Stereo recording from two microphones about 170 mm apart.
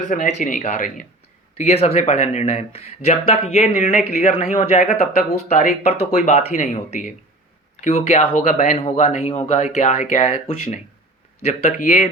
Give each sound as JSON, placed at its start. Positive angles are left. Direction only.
{"t": 0.0, "sound": "speech", "side_deg": 45}
{"t": 4.9, "sound": "speech", "side_deg": 60}
{"t": 5.5, "sound": "speech", "side_deg": 40}